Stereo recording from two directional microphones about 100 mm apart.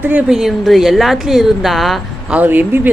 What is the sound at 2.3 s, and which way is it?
Speech, 20° right (ahead or behind).